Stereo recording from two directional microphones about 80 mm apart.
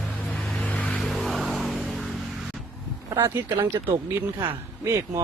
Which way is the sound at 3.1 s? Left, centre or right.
Right.